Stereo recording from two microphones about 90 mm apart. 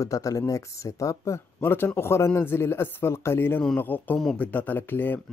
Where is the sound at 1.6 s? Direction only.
25° left (ahead or behind).